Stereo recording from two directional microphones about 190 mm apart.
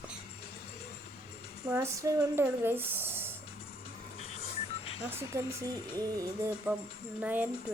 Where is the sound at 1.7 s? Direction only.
15° right (ahead or behind).